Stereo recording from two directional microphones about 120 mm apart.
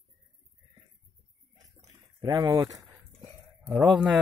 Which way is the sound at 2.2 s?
30° right (ahead or behind).